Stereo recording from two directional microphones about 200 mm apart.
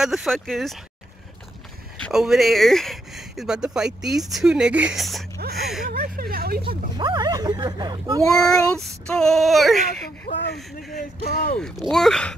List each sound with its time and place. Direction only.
0.0 s speech: centre (ahead or behind)
2.0 s speech: centre (ahead or behind)
5.9 s a sound: 50° right (ahead or behind)
7.0 s speech: 20° right (ahead or behind)
8.4 s speech: centre (ahead or behind)
10.2 s speech: 55° left (ahead or behind)
10.5 s speech: centre (ahead or behind)
11.0 s speech: 50° left (ahead or behind)
11.5 s speech: 5° left (ahead or behind)